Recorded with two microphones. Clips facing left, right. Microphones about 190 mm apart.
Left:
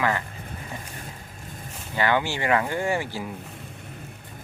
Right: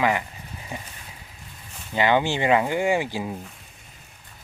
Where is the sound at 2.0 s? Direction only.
20° right (ahead or behind).